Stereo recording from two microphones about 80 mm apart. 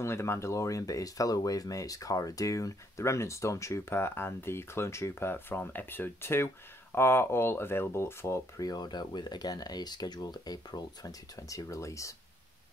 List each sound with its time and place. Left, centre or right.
0.0 s speech: left
8.5 s speech: left